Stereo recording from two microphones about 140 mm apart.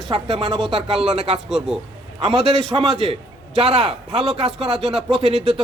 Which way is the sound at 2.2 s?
45° right (ahead or behind).